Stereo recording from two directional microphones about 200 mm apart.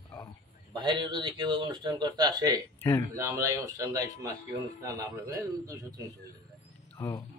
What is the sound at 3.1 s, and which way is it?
A man's voice, 15° right (ahead or behind).